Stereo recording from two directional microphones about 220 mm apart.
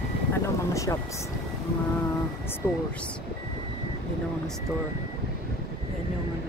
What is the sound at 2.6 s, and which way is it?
Speech, 10° left (ahead or behind).